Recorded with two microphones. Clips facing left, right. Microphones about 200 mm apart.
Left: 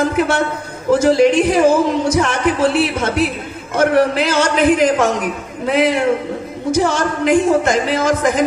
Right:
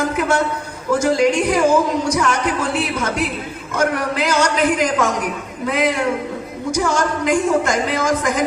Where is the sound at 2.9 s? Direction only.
25° left (ahead or behind).